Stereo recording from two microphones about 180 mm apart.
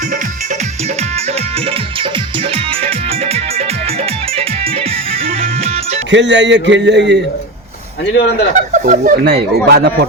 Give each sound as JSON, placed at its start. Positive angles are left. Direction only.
{"t": 2.8, "sound": "music", "side_deg": -35}
{"t": 5.2, "sound": "music", "side_deg": -35}
{"t": 6.1, "sound": "speech", "side_deg": -80}
{"t": 8.5, "sound": "speech", "side_deg": -45}